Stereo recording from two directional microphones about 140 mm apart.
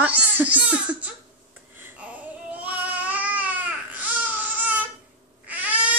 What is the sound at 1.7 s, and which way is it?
Babbling, 15° right (ahead or behind).